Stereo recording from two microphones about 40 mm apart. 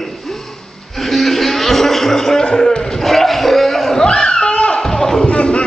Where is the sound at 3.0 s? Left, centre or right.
Centre.